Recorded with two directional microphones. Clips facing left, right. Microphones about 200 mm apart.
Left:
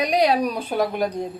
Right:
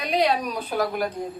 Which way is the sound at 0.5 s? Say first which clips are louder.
Left 2 dB; 20° left (ahead or behind).